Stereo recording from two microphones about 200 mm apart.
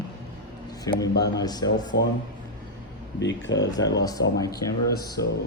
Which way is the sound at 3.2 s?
60° left (ahead or behind).